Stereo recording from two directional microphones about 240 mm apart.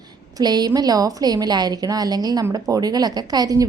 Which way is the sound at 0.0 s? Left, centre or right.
Centre.